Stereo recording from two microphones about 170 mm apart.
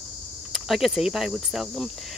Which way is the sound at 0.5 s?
Centre (ahead or behind).